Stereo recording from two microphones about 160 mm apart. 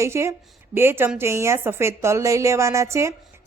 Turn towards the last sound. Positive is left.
turn(degrees=-15)  # may be behind; listen again after turning